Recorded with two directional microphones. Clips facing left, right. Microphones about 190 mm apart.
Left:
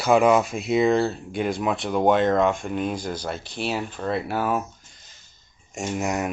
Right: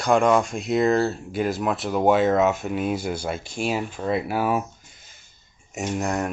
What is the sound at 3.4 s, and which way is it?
Speech, 45° right (ahead or behind).